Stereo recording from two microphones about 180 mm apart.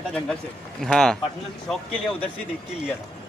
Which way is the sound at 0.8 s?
5° left (ahead or behind).